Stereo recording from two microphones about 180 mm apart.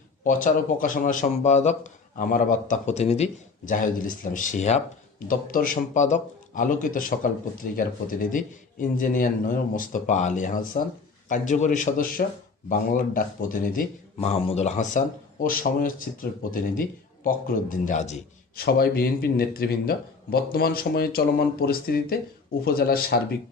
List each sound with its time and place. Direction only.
0.3 s a man's voice: 45° left (ahead or behind)
3.7 s a man's voice: 50° left (ahead or behind)
14.2 s speech: 35° left (ahead or behind)
15.4 s a man's voice: 50° left (ahead or behind)
18.5 s a man's voice: 60° left (ahead or behind)